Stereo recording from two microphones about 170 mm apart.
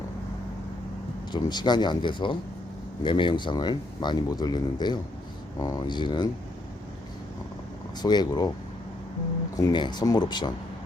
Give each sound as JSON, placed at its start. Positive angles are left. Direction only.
{"t": 1.3, "sound": "speech", "side_deg": 25}
{"t": 8.0, "sound": "speech", "side_deg": 25}
{"t": 9.6, "sound": "speech", "side_deg": 25}